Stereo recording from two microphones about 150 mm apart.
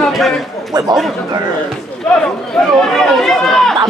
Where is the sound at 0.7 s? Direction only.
25° right (ahead or behind).